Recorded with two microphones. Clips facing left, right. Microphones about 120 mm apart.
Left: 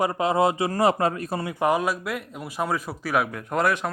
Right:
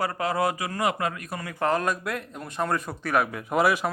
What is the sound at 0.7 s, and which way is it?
Speech, 35° left (ahead or behind).